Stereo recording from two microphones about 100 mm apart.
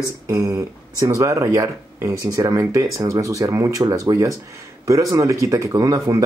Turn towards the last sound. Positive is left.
turn(degrees=-35)  # may be behind; listen again after turning